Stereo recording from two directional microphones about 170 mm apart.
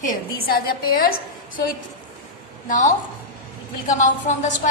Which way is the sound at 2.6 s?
50° left (ahead or behind).